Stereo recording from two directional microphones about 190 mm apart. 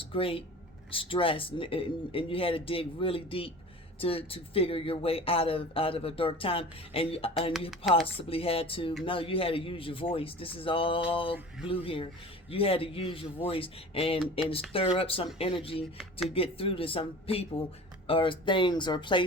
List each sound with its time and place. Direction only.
0.0 s speech: 30° left (ahead or behind)
7.7 s speech: centre (ahead or behind)
8.1 s speech: 30° left (ahead or behind)